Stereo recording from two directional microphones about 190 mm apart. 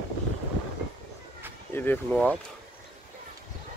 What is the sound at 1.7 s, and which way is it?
Speech, 10° left (ahead or behind).